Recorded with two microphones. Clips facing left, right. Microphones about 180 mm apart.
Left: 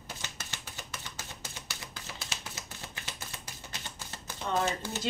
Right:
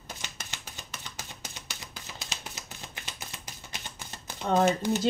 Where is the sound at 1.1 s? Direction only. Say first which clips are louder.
Right 1 dB; 15° right (ahead or behind).